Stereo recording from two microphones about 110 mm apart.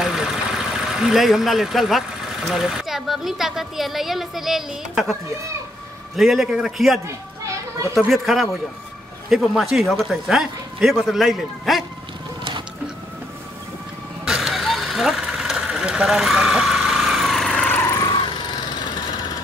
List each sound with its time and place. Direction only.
0.0 s vehicle: 5° right (ahead or behind)
0.7 s speech: 5° right (ahead or behind)
6.1 s speech: centre (ahead or behind)
8.1 s speech: centre (ahead or behind)
14.2 s vehicle: 5° right (ahead or behind)
17.6 s vehicle: 25° left (ahead or behind)
18.0 s dog: 45° left (ahead or behind)